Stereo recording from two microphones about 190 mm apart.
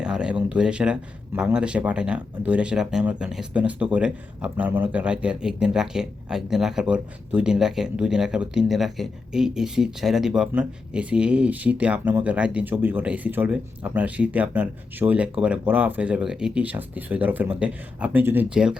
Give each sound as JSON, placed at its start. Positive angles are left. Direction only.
{"t": 0.0, "sound": "speech", "side_deg": -5}